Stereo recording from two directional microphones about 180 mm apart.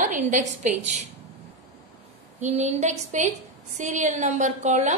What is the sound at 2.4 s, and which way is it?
A woman's voice, 40° right (ahead or behind).